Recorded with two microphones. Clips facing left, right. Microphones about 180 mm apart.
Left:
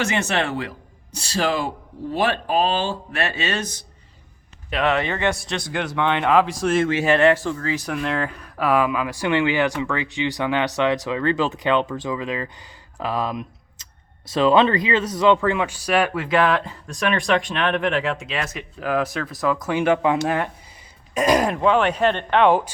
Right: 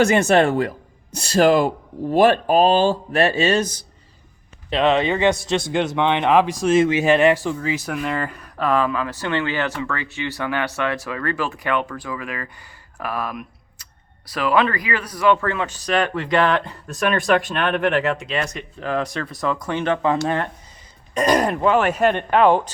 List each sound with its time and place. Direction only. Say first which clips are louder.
0.1 s speech: right 7 dB; 45° right (ahead or behind)
4.7 s speech: right 4 dB; 20° right (ahead or behind); by 8.6 s centre (ahead or behind)
8.6 s speech: even; 10° left (ahead or behind)